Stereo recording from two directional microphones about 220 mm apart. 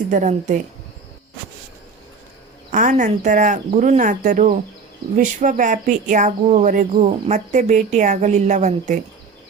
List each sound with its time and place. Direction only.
0.1 s speech: 35° right (ahead or behind)
2.6 s speech: 35° right (ahead or behind)